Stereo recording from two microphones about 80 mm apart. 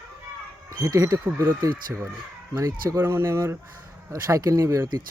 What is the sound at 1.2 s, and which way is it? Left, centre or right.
Speech, right.